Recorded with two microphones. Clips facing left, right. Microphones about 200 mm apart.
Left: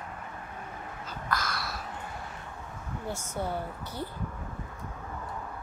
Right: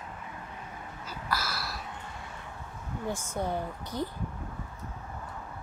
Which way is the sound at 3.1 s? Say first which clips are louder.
Right 2 dB; 15° right (ahead or behind).